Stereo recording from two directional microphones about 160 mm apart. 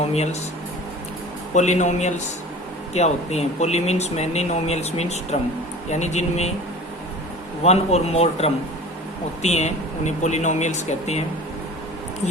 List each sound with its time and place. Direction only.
0.1 s speech: 45° left (ahead or behind)
1.5 s speech: 45° left (ahead or behind)
7.6 s a man's voice: 40° left (ahead or behind)